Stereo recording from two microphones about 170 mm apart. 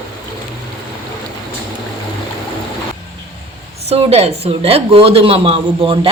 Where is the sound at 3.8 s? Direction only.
35° right (ahead or behind).